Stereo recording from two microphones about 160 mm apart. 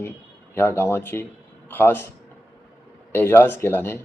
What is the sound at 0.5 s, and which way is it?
Speech, 15° left (ahead or behind).